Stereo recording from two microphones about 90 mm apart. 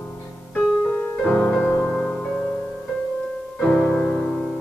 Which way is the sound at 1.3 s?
15° left (ahead or behind).